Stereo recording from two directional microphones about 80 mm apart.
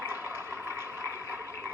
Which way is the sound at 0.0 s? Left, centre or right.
Right.